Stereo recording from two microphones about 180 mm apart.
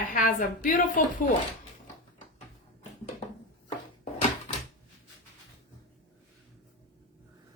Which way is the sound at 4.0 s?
40° left (ahead or behind).